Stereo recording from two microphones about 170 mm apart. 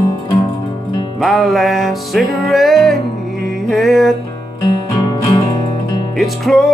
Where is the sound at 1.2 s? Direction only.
Centre (ahead or behind).